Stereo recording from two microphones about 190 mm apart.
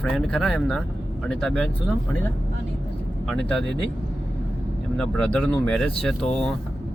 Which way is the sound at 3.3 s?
5° left (ahead or behind).